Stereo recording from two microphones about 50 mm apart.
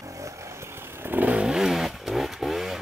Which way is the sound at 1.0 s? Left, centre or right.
Right.